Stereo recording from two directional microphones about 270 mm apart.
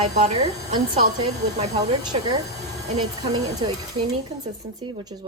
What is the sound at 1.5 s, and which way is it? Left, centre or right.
Speech, right.